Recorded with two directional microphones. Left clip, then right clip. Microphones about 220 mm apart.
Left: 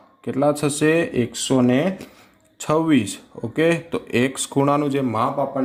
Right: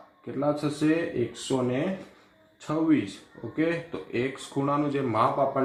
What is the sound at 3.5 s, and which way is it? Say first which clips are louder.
Speech: left 9 dB; 45° left (ahead or behind).